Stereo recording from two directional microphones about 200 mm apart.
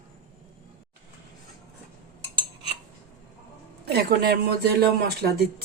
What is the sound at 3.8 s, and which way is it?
A man's voice, 55° right (ahead or behind).